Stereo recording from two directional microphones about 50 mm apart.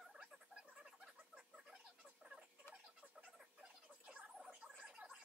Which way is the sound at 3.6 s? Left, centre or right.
Centre.